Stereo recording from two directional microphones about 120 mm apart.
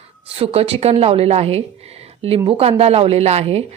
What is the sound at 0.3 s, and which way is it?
A woman's voice, 55° right (ahead or behind).